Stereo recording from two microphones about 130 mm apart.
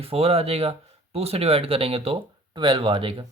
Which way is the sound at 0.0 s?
50° right (ahead or behind).